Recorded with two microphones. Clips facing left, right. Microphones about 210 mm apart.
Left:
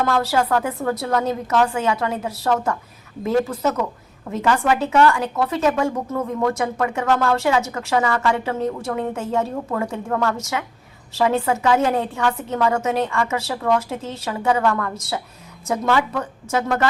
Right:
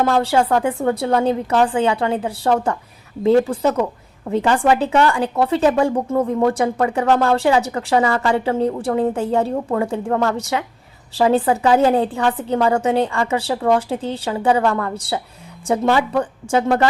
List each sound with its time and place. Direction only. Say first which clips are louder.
0.0 s a woman's voice: right 3 dB; 30° right (ahead or behind)